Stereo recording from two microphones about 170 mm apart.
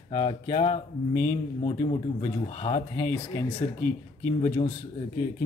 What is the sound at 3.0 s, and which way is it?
Speech, 10° left (ahead or behind).